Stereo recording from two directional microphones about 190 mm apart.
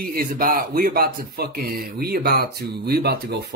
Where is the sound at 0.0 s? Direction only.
50° right (ahead or behind).